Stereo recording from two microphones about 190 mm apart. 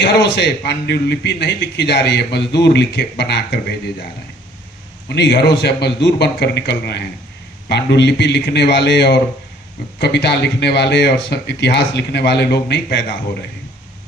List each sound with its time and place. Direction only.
0.0 s a man's voice: 65° left (ahead or behind)
5.0 s a man's voice: 60° left (ahead or behind)